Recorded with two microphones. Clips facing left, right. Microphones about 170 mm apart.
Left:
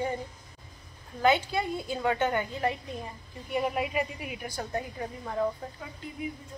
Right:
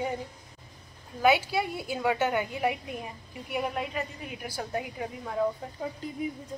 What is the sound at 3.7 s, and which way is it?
Speech, 5° left (ahead or behind).